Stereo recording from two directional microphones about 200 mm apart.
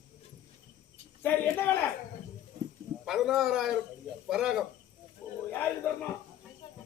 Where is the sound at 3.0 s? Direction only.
Centre (ahead or behind).